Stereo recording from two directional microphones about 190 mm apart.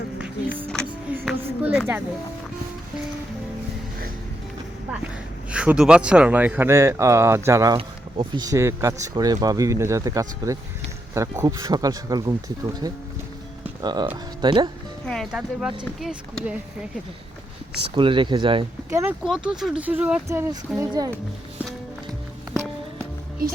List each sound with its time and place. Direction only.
1.2 s a sound: 5° right (ahead or behind)
5.5 s speech: 5° right (ahead or behind); by 14.7 s 25° right (ahead or behind)
15.0 s speech: 5° left (ahead or behind)
17.7 s speech: 25° right (ahead or behind)
18.9 s speech: 15° right (ahead or behind)
19.5 s speech: 5° right (ahead or behind); by 21.1 s 20° right (ahead or behind)